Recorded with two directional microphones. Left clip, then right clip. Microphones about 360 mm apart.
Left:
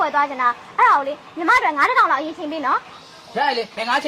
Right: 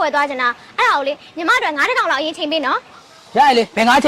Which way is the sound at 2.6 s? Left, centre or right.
Right.